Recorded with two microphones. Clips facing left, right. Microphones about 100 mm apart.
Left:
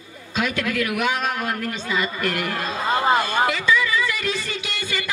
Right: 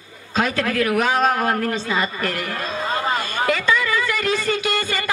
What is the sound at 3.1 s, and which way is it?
Speech, 45° left (ahead or behind).